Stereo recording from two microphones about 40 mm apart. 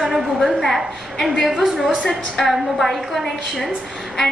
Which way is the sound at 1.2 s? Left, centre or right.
Centre.